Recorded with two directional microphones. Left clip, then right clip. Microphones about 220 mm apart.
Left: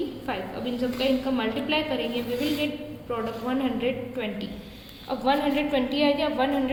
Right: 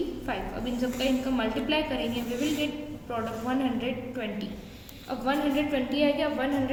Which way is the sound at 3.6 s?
10° left (ahead or behind).